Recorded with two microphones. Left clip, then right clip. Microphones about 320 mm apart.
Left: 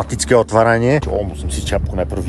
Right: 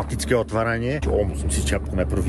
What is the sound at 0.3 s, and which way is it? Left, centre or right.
Speech, centre.